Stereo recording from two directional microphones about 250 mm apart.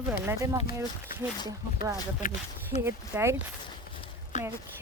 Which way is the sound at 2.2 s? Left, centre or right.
Left.